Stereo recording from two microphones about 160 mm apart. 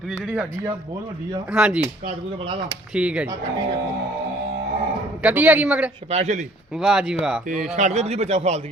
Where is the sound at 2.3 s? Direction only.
35° right (ahead or behind).